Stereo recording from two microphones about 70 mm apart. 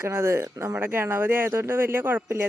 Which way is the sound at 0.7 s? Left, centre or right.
Right.